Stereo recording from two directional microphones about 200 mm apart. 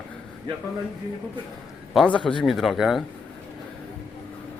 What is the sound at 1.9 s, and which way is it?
Speech, 5° left (ahead or behind).